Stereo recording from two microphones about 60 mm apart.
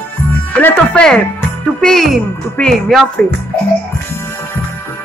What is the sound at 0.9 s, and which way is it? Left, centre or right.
Speech, centre.